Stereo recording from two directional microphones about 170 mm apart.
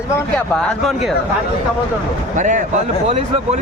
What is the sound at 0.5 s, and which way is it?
Speech, 5° left (ahead or behind).